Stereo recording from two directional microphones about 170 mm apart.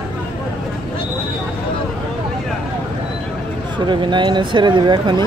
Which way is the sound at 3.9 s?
25° right (ahead or behind).